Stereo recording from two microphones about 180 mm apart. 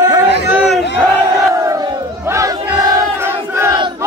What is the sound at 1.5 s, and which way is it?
Battle cry, 15° right (ahead or behind).